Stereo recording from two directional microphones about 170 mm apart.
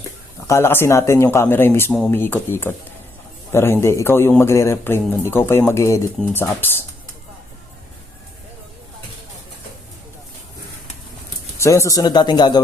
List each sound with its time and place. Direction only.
0.4 s a man's voice: 15° left (ahead or behind)
11.5 s speech: 15° left (ahead or behind)